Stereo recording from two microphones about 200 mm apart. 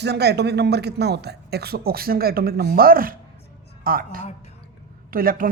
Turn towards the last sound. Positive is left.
turn(degrees=-45)  # may be behind; listen again after turning